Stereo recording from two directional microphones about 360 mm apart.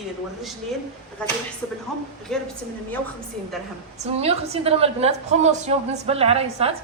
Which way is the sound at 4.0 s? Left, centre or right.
Centre.